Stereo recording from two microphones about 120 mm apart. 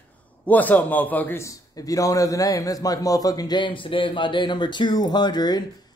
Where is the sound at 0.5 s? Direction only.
15° left (ahead or behind).